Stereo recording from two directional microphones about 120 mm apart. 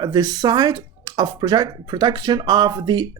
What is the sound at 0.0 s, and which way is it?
Speech, 35° right (ahead or behind).